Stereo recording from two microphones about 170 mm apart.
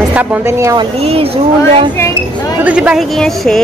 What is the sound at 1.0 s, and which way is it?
Speech, 35° right (ahead or behind).